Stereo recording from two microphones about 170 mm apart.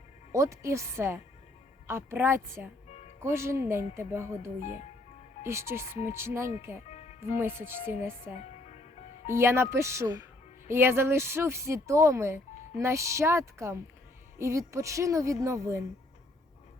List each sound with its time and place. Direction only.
0.3 s speech: 15° right (ahead or behind)
8.4 s music: 40° left (ahead or behind)
9.2 s speech: 15° right (ahead or behind)